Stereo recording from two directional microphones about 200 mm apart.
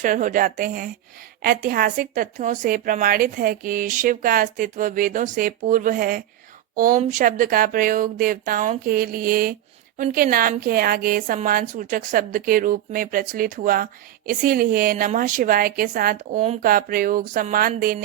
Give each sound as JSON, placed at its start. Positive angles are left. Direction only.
{"t": 0.0, "sound": "speech", "side_deg": -40}